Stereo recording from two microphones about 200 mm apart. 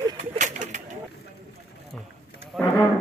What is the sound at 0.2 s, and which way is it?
Bird, 35° right (ahead or behind).